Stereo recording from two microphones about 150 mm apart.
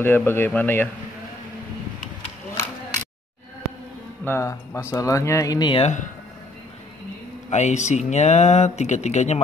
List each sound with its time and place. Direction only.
0.0 s speech: 15° left (ahead or behind)
4.2 s speech: 15° left (ahead or behind)
5.8 s speech: 50° left (ahead or behind)
7.4 s speech: 50° left (ahead or behind)